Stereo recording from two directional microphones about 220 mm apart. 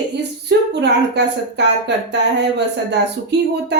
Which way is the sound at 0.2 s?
50° right (ahead or behind).